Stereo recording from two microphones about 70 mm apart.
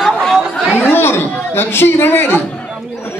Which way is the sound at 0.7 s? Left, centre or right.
Left.